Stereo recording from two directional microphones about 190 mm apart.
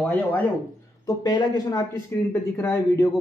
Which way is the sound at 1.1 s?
20° left (ahead or behind).